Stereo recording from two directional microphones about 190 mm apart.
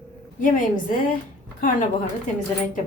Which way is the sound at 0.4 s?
45° left (ahead or behind).